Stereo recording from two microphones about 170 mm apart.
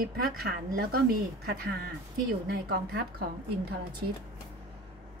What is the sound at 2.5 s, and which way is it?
Speech, 70° right (ahead or behind).